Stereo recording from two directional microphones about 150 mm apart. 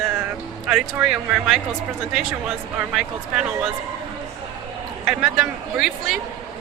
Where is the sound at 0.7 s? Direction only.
5° right (ahead or behind).